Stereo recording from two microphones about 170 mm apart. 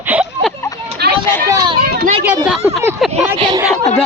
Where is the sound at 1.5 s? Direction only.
20° right (ahead or behind).